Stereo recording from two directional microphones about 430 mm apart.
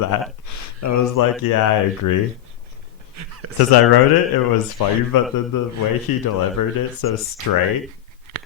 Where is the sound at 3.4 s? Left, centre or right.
Right.